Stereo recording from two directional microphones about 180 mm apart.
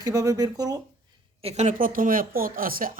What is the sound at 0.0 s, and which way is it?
Speech, 20° right (ahead or behind).